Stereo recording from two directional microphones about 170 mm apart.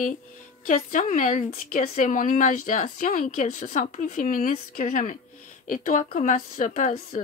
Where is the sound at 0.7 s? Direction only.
50° left (ahead or behind).